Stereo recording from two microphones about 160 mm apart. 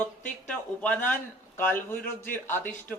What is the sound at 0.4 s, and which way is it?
Speech, 10° left (ahead or behind).